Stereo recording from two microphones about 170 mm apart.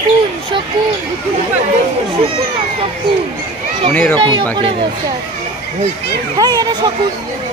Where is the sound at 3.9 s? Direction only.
10° left (ahead or behind).